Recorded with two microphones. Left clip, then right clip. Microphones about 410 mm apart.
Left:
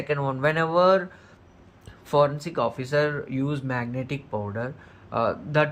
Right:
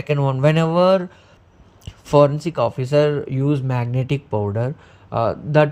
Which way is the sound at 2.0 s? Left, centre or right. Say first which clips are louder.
Right 7 dB; centre.